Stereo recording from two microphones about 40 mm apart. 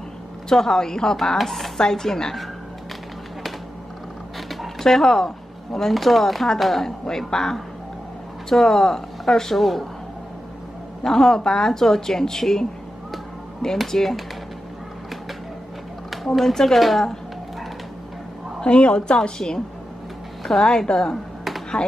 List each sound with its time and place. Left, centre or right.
0.5 s speech: centre
4.7 s speech: centre
11.0 s speech: centre
13.7 s a woman's voice: centre
16.3 s a woman's voice: centre
18.6 s a woman's voice: left; by 20.7 s centre
20.7 s a woman's voice: left